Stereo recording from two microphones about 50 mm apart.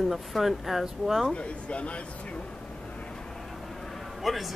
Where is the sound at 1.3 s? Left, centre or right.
Left.